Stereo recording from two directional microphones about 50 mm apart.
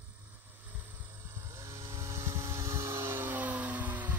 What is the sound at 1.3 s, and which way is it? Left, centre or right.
Vehicle, right.